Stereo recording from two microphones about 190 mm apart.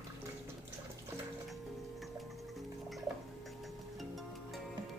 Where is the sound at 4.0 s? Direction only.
Centre (ahead or behind).